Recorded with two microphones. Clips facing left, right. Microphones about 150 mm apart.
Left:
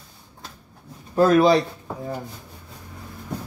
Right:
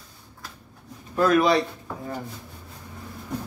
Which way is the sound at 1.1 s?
30° left (ahead or behind).